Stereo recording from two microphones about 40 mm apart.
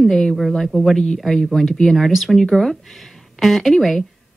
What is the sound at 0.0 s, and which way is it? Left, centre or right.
Speech, centre.